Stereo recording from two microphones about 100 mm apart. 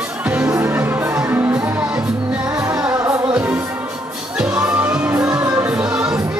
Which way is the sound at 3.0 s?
30° right (ahead or behind).